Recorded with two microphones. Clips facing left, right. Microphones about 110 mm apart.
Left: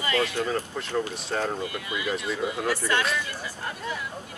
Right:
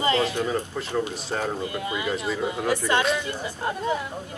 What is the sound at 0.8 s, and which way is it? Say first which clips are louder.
Speech: right 2 dB; 5° right (ahead or behind).